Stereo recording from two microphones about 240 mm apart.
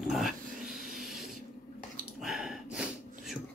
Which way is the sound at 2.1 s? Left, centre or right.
Centre.